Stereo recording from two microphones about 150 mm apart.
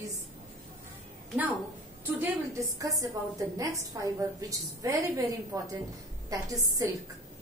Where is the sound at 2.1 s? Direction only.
15° right (ahead or behind).